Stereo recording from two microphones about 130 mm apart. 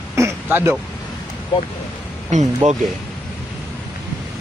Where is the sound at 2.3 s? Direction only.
65° right (ahead or behind).